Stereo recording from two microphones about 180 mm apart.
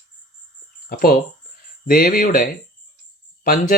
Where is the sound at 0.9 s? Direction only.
55° left (ahead or behind).